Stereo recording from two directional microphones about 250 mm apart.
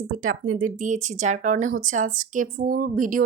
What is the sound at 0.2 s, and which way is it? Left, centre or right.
Speech, right.